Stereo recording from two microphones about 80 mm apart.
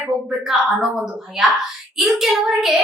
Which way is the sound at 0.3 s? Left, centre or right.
Centre.